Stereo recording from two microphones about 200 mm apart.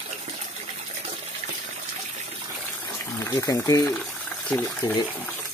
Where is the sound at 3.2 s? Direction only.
15° left (ahead or behind).